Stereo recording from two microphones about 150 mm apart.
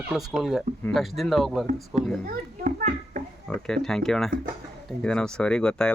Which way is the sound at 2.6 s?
60° right (ahead or behind).